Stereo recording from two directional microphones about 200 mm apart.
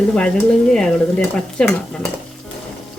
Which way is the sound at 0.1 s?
5° left (ahead or behind).